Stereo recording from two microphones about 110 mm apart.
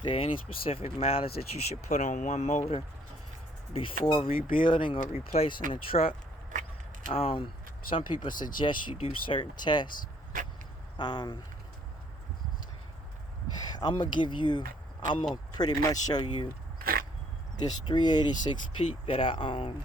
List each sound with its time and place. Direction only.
0.0 s speech: 55° left (ahead or behind); by 2.8 s 80° left
3.7 s speech: 55° left (ahead or behind)
10.9 s speech: 40° left (ahead or behind)
13.7 s speech: 45° left (ahead or behind)
15.5 s speech: 35° left (ahead or behind)
17.6 s speech: 40° left (ahead or behind)